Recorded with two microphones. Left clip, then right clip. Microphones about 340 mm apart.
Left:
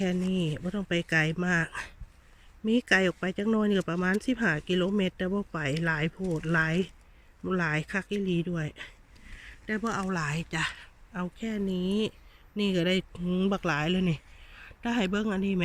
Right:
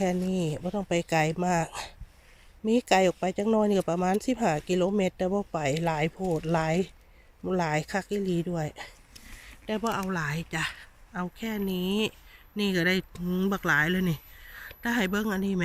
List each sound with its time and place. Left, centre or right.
0.3 s speech: right
0.6 s speech: right
0.9 s speech: centre